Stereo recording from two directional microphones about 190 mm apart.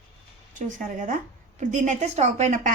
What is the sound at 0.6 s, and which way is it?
Speech, 40° right (ahead or behind).